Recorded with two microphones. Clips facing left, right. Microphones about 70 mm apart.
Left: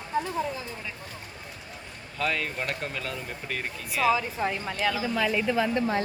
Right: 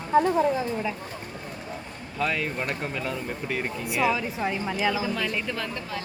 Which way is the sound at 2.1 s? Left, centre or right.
Centre.